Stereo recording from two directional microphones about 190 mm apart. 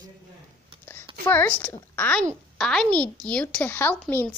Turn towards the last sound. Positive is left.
turn(degrees=10)  # may be behind; listen again after turning